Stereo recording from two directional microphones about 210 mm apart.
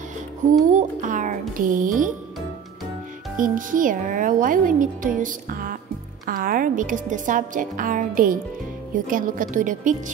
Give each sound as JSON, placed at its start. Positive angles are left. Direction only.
{"t": 0.7, "sound": "a sound", "side_deg": -35}
{"t": 1.6, "sound": "a child's voice", "side_deg": -40}
{"t": 3.3, "sound": "a child's voice", "side_deg": -40}